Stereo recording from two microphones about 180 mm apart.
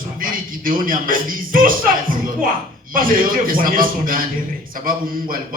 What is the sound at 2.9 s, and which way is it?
A man's voice, 50° right (ahead or behind).